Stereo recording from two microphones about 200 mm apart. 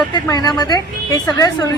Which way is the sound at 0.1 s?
20° left (ahead or behind).